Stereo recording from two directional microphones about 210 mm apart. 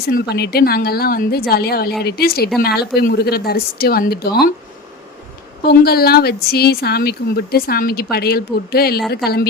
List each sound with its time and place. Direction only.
0.0 s a woman's voice: 45° left (ahead or behind)
5.6 s a woman's voice: 45° left (ahead or behind)